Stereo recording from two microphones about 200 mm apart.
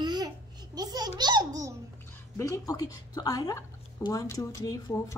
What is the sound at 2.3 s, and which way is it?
Speech, 15° left (ahead or behind).